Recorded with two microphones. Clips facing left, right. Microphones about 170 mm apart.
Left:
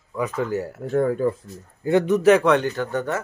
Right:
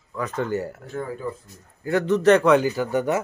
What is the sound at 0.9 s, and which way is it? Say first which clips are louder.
Speech: left 10 dB; 60° left (ahead or behind).